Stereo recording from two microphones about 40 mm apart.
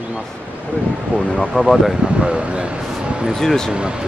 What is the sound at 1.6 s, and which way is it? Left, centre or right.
Speech, right.